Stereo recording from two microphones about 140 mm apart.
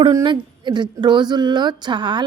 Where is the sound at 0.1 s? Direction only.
30° right (ahead or behind).